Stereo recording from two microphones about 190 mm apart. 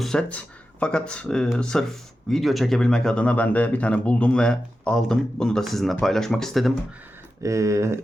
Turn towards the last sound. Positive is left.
turn(degrees=-15)  # may be behind; listen again after turning